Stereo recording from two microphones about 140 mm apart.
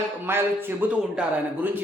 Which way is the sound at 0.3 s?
15° right (ahead or behind).